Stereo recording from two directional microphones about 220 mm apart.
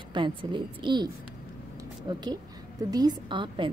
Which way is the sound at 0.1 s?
20° right (ahead or behind).